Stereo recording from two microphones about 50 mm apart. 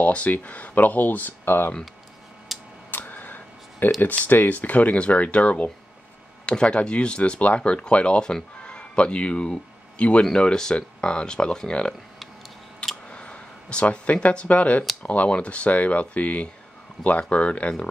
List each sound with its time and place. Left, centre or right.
0.0 s speech: left
2.5 s a sound: centre
2.9 s a sound: left
4.1 s speech: left
10.2 s speech: centre
13.1 s speech: centre